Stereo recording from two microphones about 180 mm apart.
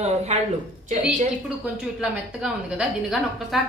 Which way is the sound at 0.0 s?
40° right (ahead or behind).